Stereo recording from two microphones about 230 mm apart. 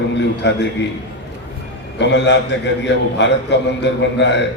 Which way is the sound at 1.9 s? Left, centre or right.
Left.